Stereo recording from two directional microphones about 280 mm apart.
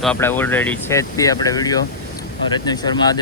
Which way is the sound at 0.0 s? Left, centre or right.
Centre.